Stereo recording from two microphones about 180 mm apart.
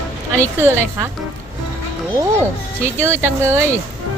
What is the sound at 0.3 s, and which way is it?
Speech, 15° right (ahead or behind).